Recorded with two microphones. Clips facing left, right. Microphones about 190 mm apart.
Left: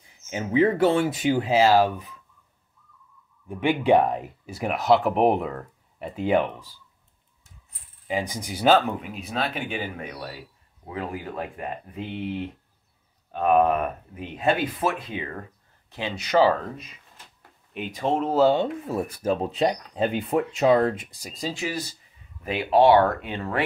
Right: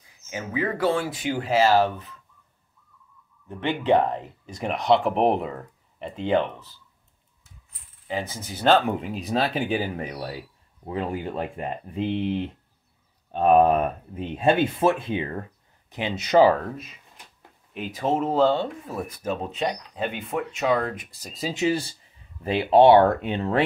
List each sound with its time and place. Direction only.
0.3 s speech: 25° left (ahead or behind)
3.4 s speech: 10° left (ahead or behind)
8.1 s speech: 15° left (ahead or behind)
8.8 s speech: 25° right (ahead or behind)
16.5 s speech: centre (ahead or behind)
18.9 s speech: 30° left (ahead or behind)
21.3 s speech: 5° right (ahead or behind)
21.5 s speech: 30° right (ahead or behind)